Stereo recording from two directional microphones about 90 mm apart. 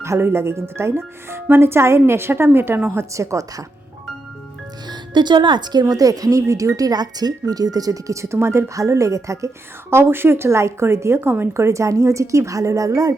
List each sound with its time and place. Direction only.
0.0 s speech: 30° right (ahead or behind)
4.9 s speech: 55° right (ahead or behind)
5.8 s speech: 40° right (ahead or behind)